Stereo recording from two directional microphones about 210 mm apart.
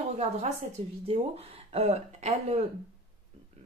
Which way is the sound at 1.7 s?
30° right (ahead or behind).